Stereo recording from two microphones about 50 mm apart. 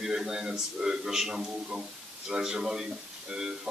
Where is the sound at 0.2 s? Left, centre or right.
Centre.